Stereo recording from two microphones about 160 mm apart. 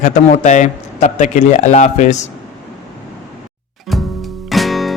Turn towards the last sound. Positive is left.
turn(degrees=0)  # may be behind; listen again after turning